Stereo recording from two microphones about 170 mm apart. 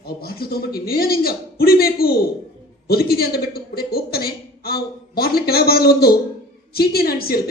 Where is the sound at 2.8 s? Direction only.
65° left (ahead or behind).